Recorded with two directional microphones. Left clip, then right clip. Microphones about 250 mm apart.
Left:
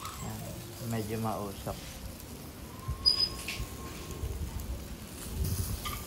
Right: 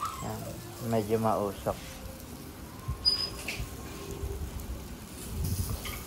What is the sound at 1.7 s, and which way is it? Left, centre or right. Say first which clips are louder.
Speech: right 7 dB; right.